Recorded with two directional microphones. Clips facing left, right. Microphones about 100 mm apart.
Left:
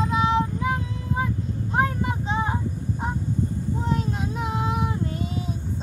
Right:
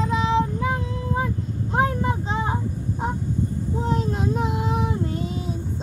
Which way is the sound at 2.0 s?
35° right (ahead or behind).